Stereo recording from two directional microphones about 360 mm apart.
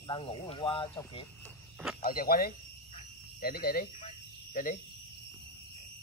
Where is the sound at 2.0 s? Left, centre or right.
Left.